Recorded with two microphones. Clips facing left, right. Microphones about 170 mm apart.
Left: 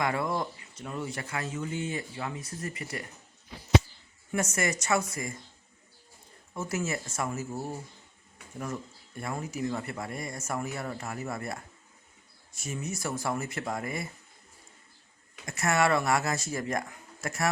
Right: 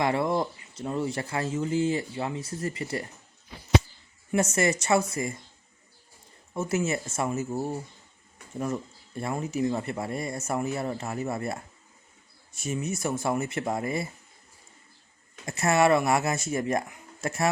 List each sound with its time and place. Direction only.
0.0 s speech: 25° right (ahead or behind)
4.3 s speech: 25° right (ahead or behind)
6.5 s speech: 25° right (ahead or behind)
15.4 s speech: 25° right (ahead or behind)